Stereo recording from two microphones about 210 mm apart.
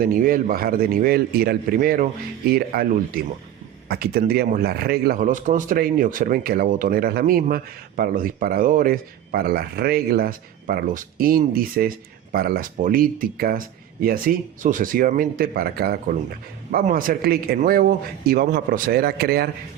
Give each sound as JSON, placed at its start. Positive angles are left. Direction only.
{"t": 0.0, "sound": "a man's voice", "side_deg": -40}